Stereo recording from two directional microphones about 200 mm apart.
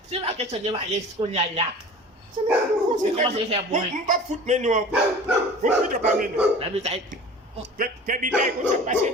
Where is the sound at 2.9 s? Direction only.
35° right (ahead or behind).